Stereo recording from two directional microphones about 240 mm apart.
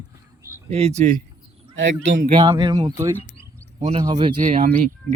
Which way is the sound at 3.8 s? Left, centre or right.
Right.